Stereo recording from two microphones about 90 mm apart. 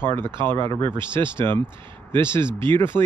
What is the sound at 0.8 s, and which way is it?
Speech, 65° right (ahead or behind).